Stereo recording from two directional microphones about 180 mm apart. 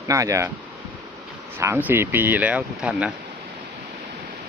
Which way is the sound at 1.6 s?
10° right (ahead or behind).